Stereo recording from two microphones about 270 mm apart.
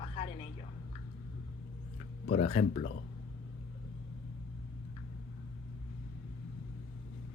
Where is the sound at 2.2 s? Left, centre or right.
Left.